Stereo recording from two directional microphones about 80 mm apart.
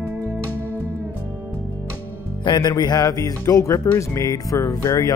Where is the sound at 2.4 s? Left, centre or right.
Left.